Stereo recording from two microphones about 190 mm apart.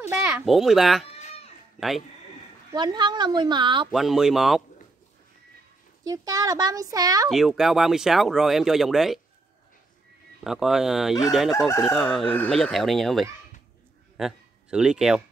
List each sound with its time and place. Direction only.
0.0 s a child's voice: 10° right (ahead or behind)
1.2 s cat: 35° left (ahead or behind)
1.8 s speech: centre (ahead or behind)
2.7 s a woman's voice: 25° right (ahead or behind)
3.9 s speech: centre (ahead or behind)
6.0 s a woman's voice: 20° right (ahead or behind)
7.2 s speech: centre (ahead or behind)
10.4 s a man's voice: centre (ahead or behind)